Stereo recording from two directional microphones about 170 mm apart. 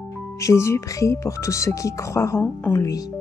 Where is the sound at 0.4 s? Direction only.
15° left (ahead or behind).